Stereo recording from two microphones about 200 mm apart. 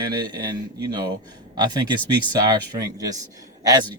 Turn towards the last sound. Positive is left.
turn(degrees=-20)  # may be behind; listen again after turning